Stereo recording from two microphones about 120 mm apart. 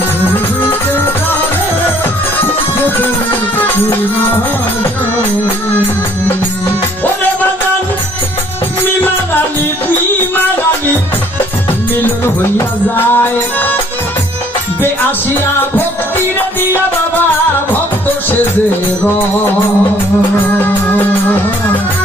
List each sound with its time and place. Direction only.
0.7 s music: 15° left (ahead or behind)
12.5 s music: 15° left (ahead or behind)